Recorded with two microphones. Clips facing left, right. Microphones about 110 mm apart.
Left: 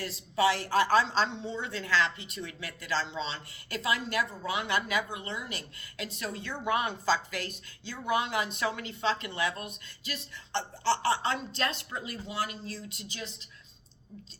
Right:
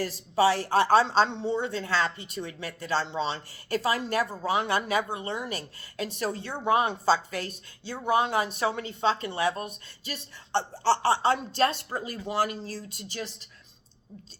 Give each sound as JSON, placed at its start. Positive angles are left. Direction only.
{"t": 0.0, "sound": "speech", "side_deg": -35}
{"t": 1.3, "sound": "a woman's voice", "side_deg": -55}
{"t": 1.5, "sound": "speech", "side_deg": -35}
{"t": 5.3, "sound": "speech", "side_deg": -50}
{"t": 6.0, "sound": "speech", "side_deg": -35}
{"t": 12.2, "sound": "speech", "side_deg": -45}